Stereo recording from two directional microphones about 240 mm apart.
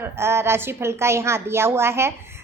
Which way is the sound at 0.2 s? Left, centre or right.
Centre.